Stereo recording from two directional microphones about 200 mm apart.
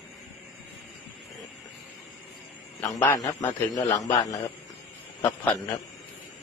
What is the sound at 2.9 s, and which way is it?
A man's voice, 10° left (ahead or behind).